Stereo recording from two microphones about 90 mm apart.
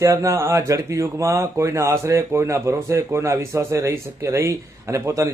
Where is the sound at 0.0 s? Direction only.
35° right (ahead or behind).